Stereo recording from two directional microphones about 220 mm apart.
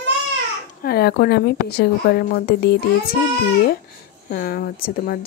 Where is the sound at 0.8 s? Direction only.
45° left (ahead or behind).